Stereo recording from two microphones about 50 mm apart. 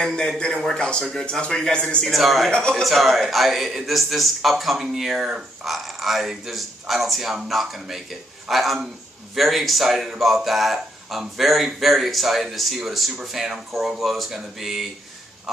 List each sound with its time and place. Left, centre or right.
0.0 s a man's voice: centre
0.7 s a man's voice: centre
2.0 s speech: centre